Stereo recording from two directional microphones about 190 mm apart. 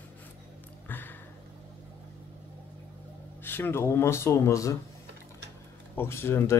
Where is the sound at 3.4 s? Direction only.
10° left (ahead or behind).